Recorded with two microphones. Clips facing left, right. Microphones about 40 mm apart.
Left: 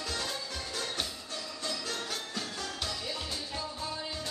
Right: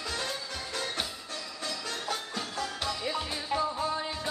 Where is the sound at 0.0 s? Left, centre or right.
Centre.